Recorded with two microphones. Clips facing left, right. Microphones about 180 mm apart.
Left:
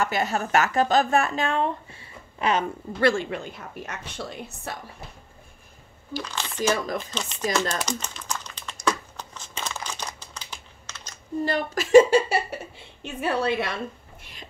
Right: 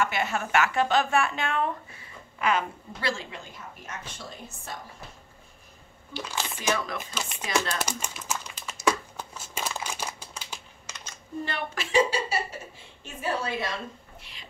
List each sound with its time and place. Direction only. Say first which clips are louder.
0.0 s speech: left 3 dB; 40° left (ahead or behind)
3.0 s a woman's voice: left 10 dB; 55° left (ahead or behind)
6.2 s speech: left 4 dB; 10° right (ahead or behind)
7.8 s crumpling: left 2 dB; 10° right (ahead or behind)
11.1 s speech: left 8 dB; 40° left (ahead or behind)
13.0 s a woman's voice: left 5 dB; 65° left (ahead or behind)